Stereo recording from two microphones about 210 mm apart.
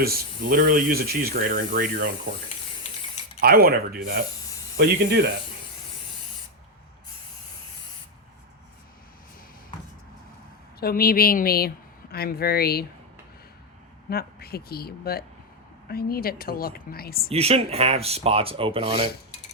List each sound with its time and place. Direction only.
0.0 s speech: 45° right (ahead or behind)
3.4 s speech: 45° right (ahead or behind)
10.8 s a woman's voice: 45° left (ahead or behind)
14.1 s a woman's voice: 45° left (ahead or behind)
17.2 s speech: 30° right (ahead or behind)